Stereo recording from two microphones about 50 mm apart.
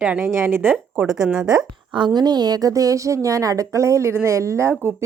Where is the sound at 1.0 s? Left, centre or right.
Centre.